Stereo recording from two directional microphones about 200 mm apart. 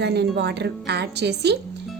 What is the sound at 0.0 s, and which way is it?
A woman's voice, 55° right (ahead or behind).